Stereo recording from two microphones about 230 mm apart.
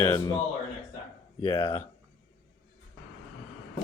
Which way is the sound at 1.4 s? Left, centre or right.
Left.